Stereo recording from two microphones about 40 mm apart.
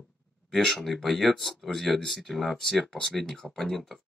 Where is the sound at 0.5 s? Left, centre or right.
Centre.